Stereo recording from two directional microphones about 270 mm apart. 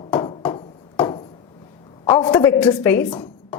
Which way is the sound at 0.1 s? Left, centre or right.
Centre.